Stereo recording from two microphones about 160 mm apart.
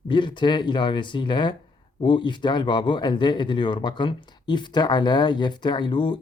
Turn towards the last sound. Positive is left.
turn(degrees=30)  # may be behind; listen again after turning